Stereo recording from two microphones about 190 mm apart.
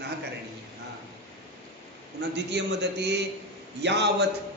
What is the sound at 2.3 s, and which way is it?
A man's voice, 65° right (ahead or behind).